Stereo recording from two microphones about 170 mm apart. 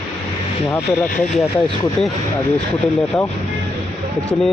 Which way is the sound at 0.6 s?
5° left (ahead or behind).